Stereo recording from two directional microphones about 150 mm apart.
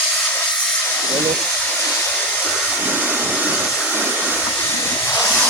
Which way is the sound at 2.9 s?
10° right (ahead or behind).